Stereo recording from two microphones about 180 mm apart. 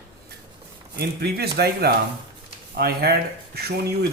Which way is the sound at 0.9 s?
65° right (ahead or behind).